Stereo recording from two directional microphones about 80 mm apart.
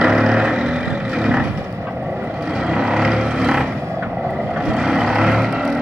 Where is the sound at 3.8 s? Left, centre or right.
Right.